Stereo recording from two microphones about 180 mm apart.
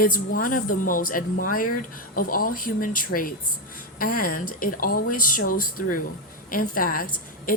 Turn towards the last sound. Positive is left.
turn(degrees=50)  # may be behind; listen again after turning